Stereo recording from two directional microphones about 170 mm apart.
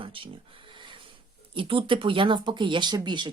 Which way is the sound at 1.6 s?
30° right (ahead or behind).